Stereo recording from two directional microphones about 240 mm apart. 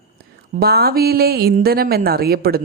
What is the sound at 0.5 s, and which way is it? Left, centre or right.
Speech, right.